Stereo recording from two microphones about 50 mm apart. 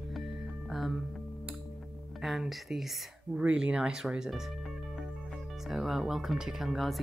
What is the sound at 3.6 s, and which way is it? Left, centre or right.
Speech, centre.